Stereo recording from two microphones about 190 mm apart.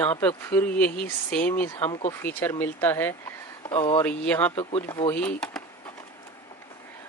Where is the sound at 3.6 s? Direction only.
20° left (ahead or behind).